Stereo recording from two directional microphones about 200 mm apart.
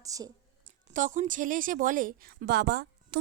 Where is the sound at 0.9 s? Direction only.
40° right (ahead or behind).